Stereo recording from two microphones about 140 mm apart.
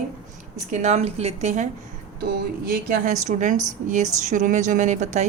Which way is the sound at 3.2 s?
60° right (ahead or behind).